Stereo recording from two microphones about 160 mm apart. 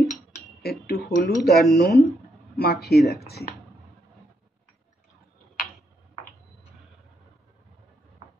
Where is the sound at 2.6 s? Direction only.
80° left.